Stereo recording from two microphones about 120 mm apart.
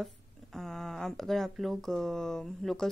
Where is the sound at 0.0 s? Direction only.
Centre (ahead or behind).